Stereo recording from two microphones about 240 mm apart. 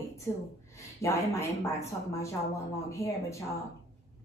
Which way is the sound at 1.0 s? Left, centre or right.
Centre.